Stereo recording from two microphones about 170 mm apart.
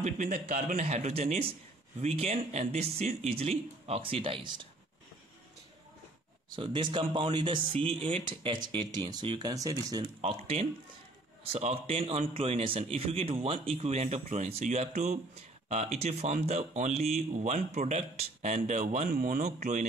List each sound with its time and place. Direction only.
0.0 s a man's voice: 50° right (ahead or behind); by 4.6 s 30° right (ahead or behind)
6.5 s speech: 30° right (ahead or behind)
10.2 s a man's voice: 35° right (ahead or behind)